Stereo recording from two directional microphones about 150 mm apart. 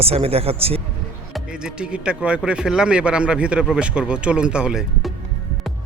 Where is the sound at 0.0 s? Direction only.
40° right (ahead or behind).